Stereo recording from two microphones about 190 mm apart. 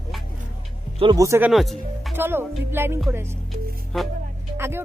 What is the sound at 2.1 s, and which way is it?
Speech, 10° right (ahead or behind).